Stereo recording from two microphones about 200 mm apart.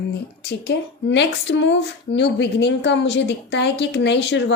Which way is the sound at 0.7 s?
60° left (ahead or behind).